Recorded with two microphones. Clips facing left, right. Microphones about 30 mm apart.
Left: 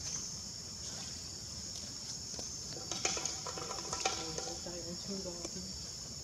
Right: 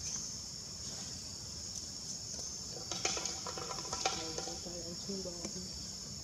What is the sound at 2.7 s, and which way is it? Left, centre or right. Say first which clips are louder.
Music: even; centre.